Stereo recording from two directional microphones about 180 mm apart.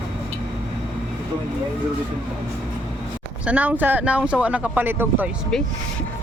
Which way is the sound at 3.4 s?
10° right (ahead or behind).